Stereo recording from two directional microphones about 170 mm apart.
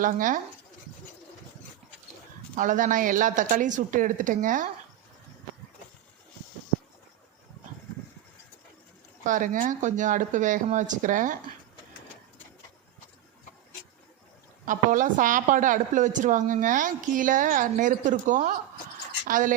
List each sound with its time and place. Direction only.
0.0 s a woman's voice: 50° right (ahead or behind)
2.6 s a woman's voice: 50° right (ahead or behind)
9.2 s a woman's voice: 50° right (ahead or behind)
14.6 s a woman's voice: 50° right (ahead or behind)